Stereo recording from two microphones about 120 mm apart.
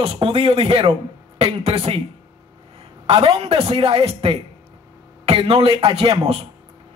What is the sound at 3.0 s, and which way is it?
A man's voice, 50° right (ahead or behind).